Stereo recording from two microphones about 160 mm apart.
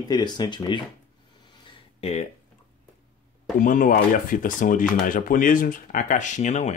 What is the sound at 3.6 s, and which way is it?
Speech, 55° left (ahead or behind).